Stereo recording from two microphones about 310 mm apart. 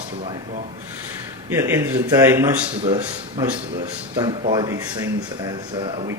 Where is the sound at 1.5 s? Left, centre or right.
Centre.